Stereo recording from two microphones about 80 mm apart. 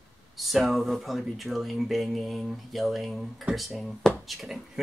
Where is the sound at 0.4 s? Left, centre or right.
Centre.